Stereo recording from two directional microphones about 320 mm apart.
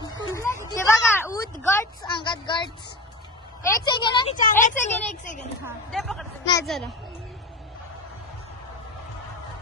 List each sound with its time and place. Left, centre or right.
0.0 s a sound: centre
1.7 s speech: centre
3.8 s speech: centre
5.6 s a woman's voice: centre
6.4 s speech: centre